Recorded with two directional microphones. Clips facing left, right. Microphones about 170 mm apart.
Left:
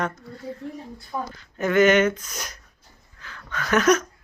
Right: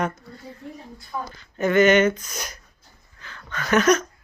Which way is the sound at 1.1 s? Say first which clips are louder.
Left 1 dB; 35° left (ahead or behind).